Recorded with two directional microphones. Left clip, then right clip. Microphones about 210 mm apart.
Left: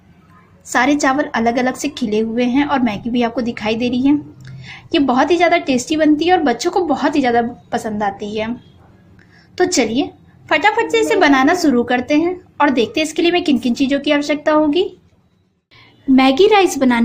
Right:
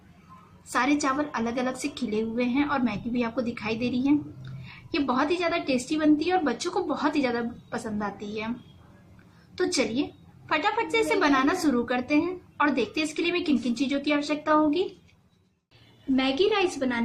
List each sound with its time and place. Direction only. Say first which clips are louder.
0.7 s a woman's voice: left 10 dB; 25° left (ahead or behind)
9.6 s a woman's voice: left 11 dB; 25° left (ahead or behind)
16.1 s a woman's voice: left 13 dB; 45° left (ahead or behind)